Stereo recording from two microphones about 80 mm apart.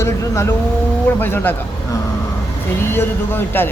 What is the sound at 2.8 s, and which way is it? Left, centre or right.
Speech, left.